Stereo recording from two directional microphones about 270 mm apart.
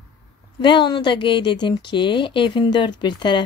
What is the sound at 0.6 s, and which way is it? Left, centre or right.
Speech, centre.